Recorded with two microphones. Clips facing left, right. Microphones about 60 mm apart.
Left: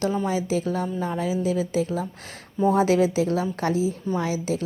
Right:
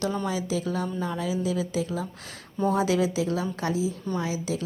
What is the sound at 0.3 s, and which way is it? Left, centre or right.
A woman's voice, left.